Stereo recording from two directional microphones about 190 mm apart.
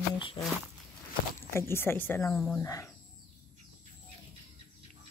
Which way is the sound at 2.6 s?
15° left (ahead or behind).